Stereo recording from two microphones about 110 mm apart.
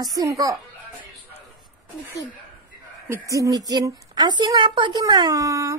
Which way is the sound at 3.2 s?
30° right (ahead or behind).